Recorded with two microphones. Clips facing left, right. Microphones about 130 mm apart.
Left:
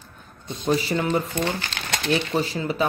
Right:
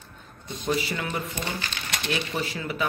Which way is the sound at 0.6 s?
30° left (ahead or behind).